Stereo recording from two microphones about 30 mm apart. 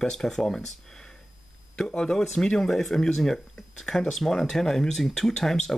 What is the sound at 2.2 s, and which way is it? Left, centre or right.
Speech, centre.